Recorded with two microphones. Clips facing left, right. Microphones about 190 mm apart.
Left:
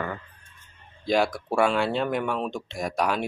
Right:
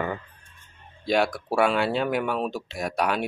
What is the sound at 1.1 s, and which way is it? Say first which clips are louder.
Speech: even; centre (ahead or behind).